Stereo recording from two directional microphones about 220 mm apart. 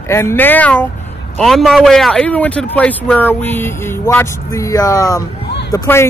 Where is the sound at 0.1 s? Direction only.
10° left (ahead or behind).